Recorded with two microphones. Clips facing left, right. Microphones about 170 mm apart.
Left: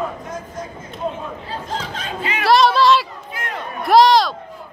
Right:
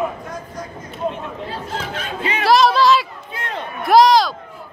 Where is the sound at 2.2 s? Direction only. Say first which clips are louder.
Right 2 dB; 30° right (ahead or behind).